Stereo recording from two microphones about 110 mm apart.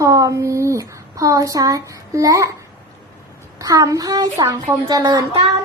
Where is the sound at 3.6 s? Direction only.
35° right (ahead or behind).